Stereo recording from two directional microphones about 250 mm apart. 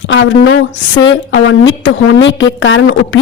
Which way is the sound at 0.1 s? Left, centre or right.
Left.